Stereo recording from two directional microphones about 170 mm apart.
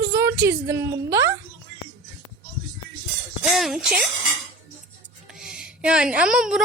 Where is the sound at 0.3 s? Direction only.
15° right (ahead or behind).